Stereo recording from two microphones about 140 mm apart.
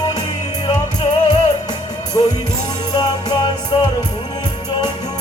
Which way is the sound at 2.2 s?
25° left (ahead or behind).